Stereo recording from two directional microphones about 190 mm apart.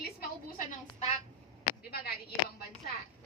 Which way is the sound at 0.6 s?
40° left (ahead or behind).